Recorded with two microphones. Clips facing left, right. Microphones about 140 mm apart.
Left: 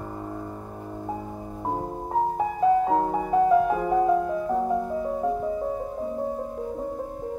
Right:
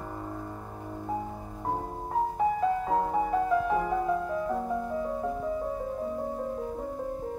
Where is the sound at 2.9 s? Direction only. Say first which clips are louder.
Left 3 dB; 25° left (ahead or behind).